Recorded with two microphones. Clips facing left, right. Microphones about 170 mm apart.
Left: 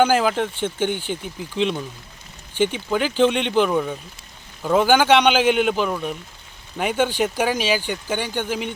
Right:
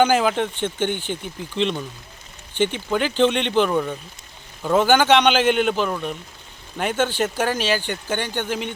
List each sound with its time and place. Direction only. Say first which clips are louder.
0.0 s speech: even; 5° left (ahead or behind)